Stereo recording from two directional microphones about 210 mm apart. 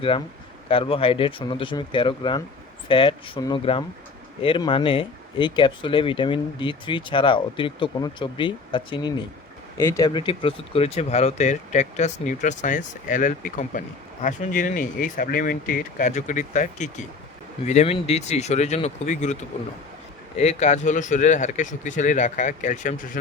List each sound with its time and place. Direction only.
0.7 s speech: 25° left (ahead or behind)